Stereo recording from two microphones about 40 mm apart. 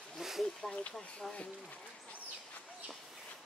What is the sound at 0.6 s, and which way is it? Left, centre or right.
Speech, centre.